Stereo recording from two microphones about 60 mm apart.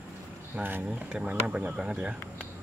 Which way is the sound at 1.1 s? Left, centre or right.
Centre.